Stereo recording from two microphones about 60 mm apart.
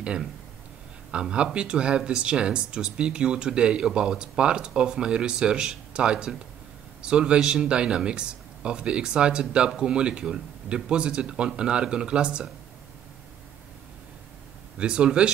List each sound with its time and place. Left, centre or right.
0.0 s speech: centre
14.8 s speech: centre